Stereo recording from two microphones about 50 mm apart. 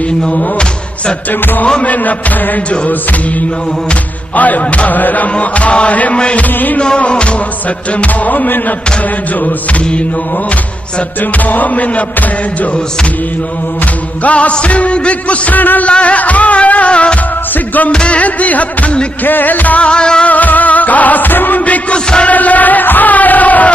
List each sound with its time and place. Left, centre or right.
0.4 s a sound: centre
1.4 s music: left
11.3 s music: left
14.2 s music: left
15.9 s music: left
19.2 s music: left
19.9 s music: centre
20.2 s music: left
21.9 s music: centre
22.3 s music: left